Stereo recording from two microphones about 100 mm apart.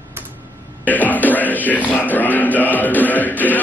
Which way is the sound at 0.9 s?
15° left (ahead or behind).